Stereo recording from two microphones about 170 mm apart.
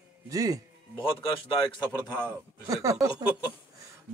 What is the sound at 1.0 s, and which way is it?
A man's voice, 30° left (ahead or behind).